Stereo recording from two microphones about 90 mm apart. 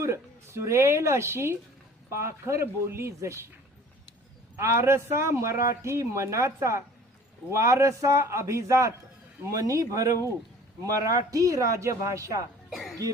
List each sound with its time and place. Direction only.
0.0 s a man's voice: 30° right (ahead or behind)
4.5 s a man's voice: 30° right (ahead or behind)